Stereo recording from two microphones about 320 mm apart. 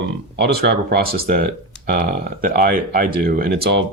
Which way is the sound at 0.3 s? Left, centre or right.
Right.